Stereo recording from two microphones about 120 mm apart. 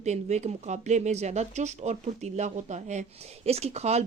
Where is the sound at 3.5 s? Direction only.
60° right (ahead or behind).